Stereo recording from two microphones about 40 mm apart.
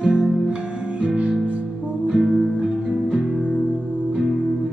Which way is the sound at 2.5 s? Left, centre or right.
Right.